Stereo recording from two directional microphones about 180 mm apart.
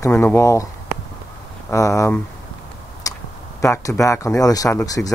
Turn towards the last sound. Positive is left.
turn(degrees=20)  # may be behind; listen again after turning